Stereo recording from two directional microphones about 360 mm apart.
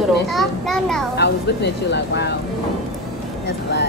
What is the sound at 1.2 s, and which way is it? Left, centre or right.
Speech, left.